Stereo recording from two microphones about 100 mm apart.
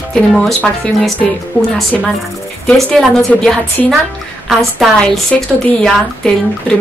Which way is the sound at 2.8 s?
15° left (ahead or behind).